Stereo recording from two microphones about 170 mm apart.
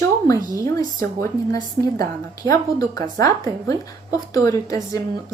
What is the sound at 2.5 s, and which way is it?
A woman's voice, 20° left (ahead or behind).